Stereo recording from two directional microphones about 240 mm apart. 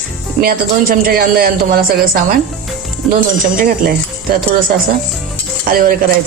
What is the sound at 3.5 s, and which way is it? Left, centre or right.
Speech, right.